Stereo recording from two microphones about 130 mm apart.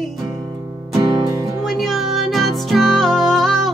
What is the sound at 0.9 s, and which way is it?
Music, 25° right (ahead or behind).